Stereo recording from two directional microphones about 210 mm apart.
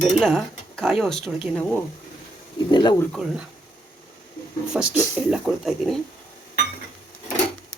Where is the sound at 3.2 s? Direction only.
Centre (ahead or behind).